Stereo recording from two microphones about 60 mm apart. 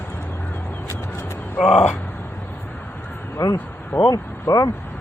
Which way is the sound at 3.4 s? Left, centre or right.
Left.